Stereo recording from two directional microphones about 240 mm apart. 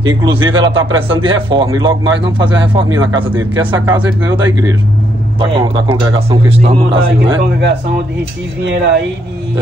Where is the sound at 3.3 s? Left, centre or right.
Centre.